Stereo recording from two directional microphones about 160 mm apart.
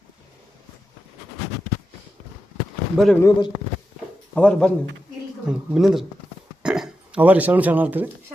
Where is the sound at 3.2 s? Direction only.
20° left (ahead or behind).